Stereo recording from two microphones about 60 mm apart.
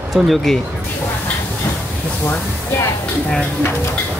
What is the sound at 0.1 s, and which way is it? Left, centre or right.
Speech, centre.